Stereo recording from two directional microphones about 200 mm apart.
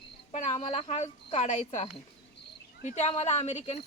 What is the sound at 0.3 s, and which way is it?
Speech, 35° left (ahead or behind).